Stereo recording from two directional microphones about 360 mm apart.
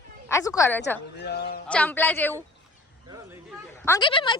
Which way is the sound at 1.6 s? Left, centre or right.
Centre.